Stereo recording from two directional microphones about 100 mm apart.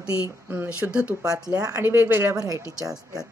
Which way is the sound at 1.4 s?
40° right (ahead or behind).